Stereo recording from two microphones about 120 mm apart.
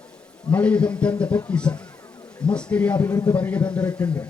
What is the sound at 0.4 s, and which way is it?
A man's voice, 10° left (ahead or behind).